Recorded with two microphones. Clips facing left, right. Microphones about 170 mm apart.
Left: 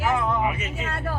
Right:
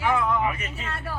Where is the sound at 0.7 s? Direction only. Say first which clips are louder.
Left 4 dB; 90° left.